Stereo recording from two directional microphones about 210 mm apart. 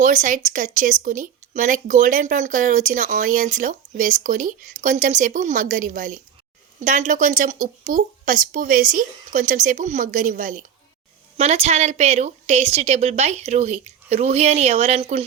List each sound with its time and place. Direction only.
0.0 s speech: 40° right (ahead or behind)